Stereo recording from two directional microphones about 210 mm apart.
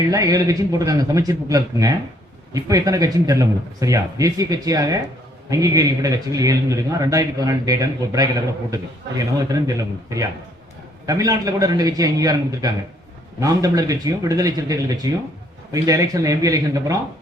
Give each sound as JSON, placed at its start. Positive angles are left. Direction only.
{"t": 0.1, "sound": "a man's voice", "side_deg": -15}
{"t": 11.0, "sound": "a man's voice", "side_deg": -15}